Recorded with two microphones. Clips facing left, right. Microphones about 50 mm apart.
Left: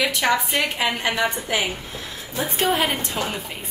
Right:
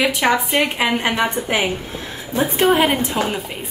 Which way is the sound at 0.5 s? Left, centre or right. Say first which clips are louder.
Right 5 dB; right.